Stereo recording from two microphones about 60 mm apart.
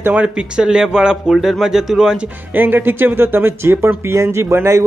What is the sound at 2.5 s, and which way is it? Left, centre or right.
A man's voice, right.